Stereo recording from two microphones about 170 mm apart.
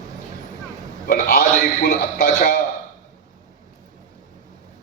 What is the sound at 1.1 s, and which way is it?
A man's voice, 65° left (ahead or behind).